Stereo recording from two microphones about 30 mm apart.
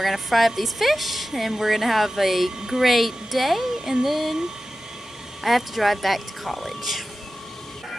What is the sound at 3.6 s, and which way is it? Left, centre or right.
Speech, centre.